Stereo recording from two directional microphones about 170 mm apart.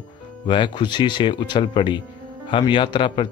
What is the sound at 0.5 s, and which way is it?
Speech, 30° left (ahead or behind).